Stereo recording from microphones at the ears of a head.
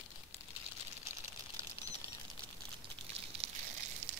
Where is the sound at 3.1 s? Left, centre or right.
Right.